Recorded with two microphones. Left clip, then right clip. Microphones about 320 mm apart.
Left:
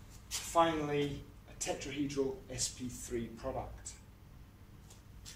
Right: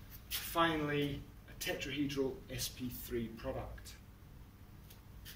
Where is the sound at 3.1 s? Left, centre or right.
Left.